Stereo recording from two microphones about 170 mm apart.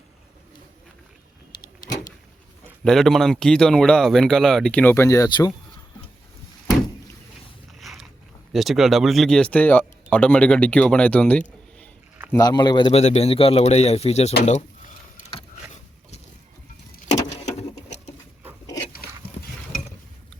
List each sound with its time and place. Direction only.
2.8 s speech: centre (ahead or behind); by 5.5 s 20° left (ahead or behind)
7.8 s a sound: centre (ahead or behind)
8.5 s speech: centre (ahead or behind)
12.4 s speech: 25° left (ahead or behind)
13.0 s speech: 40° left (ahead or behind)
14.4 s a sound: 45° left (ahead or behind)